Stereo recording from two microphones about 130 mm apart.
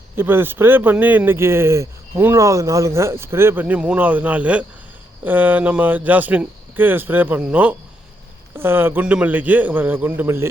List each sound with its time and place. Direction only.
0.2 s speech: 15° right (ahead or behind)